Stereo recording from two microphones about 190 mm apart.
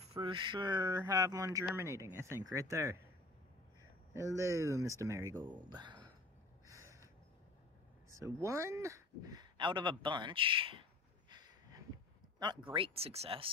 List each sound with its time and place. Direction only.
0.1 s speech: 25° right (ahead or behind)
4.1 s speech: 15° right (ahead or behind)
6.7 s a sound: 15° right (ahead or behind)
8.2 s speech: 15° right (ahead or behind)
11.2 s a sound: 20° right (ahead or behind)
12.7 s speech: 30° right (ahead or behind)